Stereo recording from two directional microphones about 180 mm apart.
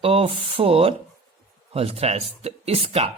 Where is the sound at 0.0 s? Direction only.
30° right (ahead or behind).